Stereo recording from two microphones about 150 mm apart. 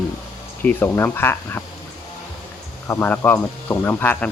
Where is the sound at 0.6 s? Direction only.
10° left (ahead or behind).